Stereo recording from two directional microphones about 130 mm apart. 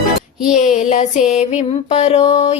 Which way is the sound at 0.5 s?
65° left (ahead or behind).